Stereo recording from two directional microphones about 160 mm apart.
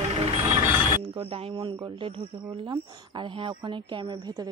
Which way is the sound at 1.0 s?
35° right (ahead or behind).